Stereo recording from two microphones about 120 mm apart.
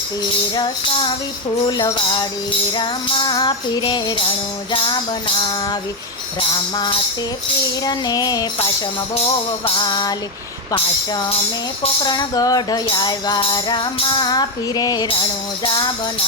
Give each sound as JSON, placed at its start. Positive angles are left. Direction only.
{"t": 1.6, "sound": "music", "side_deg": 40}
{"t": 7.9, "sound": "music", "side_deg": 35}
{"t": 9.6, "sound": "music", "side_deg": 40}